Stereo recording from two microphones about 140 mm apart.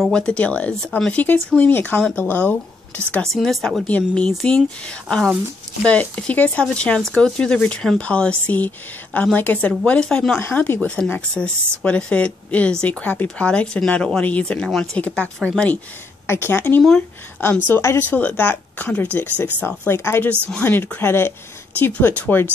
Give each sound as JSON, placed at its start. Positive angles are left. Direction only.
{"t": 0.0, "sound": "speech", "side_deg": 5}
{"t": 3.3, "sound": "speech", "side_deg": 0}